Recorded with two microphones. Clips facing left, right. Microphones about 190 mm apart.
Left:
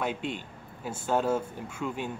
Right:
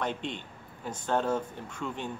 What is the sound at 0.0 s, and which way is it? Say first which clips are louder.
Speech: left 2 dB; 5° left (ahead or behind).